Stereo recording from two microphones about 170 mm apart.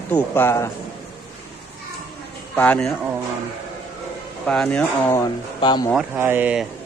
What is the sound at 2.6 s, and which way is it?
Speech, 10° left (ahead or behind).